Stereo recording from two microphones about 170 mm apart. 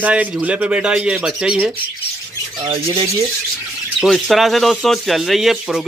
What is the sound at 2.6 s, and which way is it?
Speech, 30° right (ahead or behind).